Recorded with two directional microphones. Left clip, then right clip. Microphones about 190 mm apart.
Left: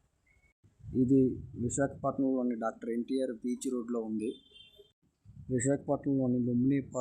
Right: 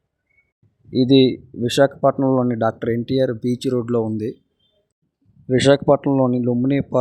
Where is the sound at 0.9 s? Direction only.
40° right (ahead or behind).